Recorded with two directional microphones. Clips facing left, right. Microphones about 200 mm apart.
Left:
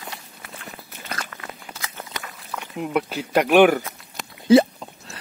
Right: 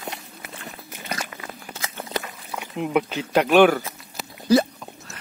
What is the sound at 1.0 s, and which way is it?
Biting, 10° right (ahead or behind).